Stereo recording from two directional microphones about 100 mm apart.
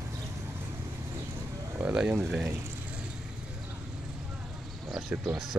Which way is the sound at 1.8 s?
5° right (ahead or behind).